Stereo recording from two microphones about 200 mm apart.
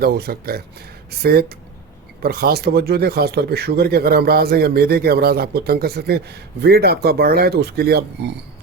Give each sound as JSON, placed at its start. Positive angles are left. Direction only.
{"t": 0.0, "sound": "speech", "side_deg": -50}